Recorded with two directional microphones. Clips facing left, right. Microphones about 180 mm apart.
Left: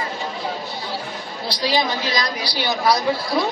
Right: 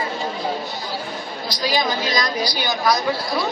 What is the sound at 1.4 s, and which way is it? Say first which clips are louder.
A woman's voice: left 1 dB; 30° left (ahead or behind).